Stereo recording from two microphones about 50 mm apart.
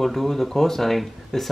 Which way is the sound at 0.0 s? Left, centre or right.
Centre.